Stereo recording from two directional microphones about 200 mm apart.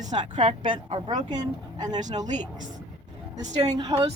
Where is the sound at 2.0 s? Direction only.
35° right (ahead or behind).